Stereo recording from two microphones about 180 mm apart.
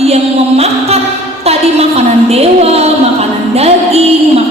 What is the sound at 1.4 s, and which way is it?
A woman's voice, 35° right (ahead or behind).